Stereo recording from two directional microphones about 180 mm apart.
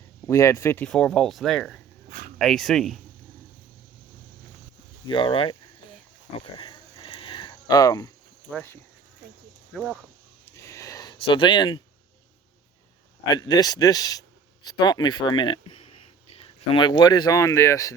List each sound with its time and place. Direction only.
0.3 s speech: 15° left (ahead or behind)
0.9 s speech: 5° left (ahead or behind)
2.0 s dog: 50° right (ahead or behind)
2.4 s speech: centre (ahead or behind)
5.0 s speech: 25° left (ahead or behind)
7.0 s a sound: 30° left (ahead or behind)
8.4 s speech: 10° left (ahead or behind)
9.7 s speech: 10° right (ahead or behind)
10.5 s a sound: 15° left (ahead or behind)
13.2 s speech: 20° left (ahead or behind)